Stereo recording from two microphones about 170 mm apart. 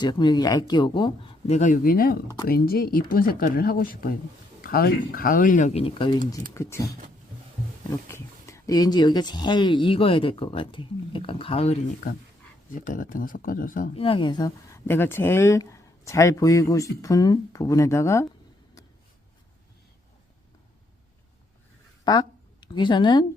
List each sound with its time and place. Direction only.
0.0 s speech: 25° left (ahead or behind)
6.5 s speech: 15° left (ahead or behind)
7.9 s speech: 15° left (ahead or behind); by 11.8 s 35° left (ahead or behind)
12.0 s speech: 45° left (ahead or behind)
13.9 s speech: 30° left (ahead or behind); by 18.3 s 15° left (ahead or behind)
22.0 s a sound: 25° left (ahead or behind)